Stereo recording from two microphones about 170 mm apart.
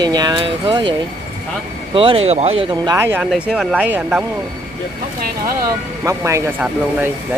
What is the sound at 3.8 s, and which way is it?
Speech, 10° right (ahead or behind).